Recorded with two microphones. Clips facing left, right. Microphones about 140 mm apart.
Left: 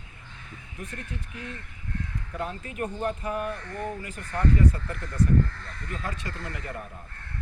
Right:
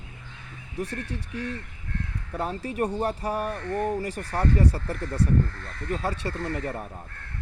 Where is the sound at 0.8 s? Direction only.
75° right (ahead or behind).